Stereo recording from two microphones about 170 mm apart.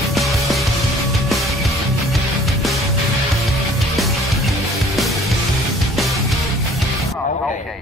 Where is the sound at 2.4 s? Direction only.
Centre (ahead or behind).